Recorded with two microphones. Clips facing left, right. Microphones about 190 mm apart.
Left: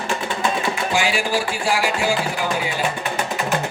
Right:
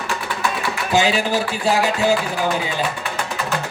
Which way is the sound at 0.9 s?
20° right (ahead or behind).